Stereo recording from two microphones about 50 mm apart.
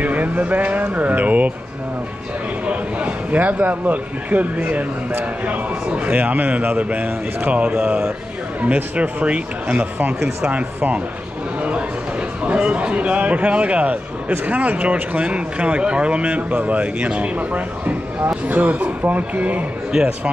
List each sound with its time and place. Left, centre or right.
0.0 s a man's voice: right
2.6 s a man's voice: right
12.4 s a man's voice: right
19.9 s a man's voice: centre